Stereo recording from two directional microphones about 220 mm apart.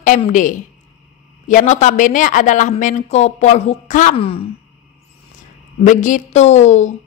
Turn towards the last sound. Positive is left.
turn(degrees=30)  # may be behind; listen again after turning